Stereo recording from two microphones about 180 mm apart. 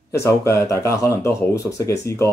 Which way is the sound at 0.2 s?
15° left (ahead or behind).